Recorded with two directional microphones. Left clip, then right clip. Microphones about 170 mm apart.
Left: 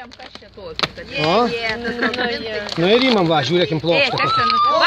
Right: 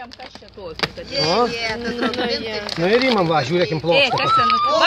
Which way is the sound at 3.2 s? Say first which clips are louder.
Left 1 dB; 45° left (ahead or behind).